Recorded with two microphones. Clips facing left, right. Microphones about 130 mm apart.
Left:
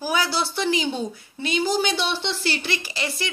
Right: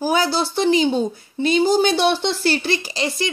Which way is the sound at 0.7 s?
35° right (ahead or behind).